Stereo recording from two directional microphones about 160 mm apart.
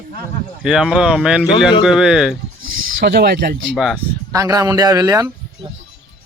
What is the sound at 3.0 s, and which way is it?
Speech, 90° right.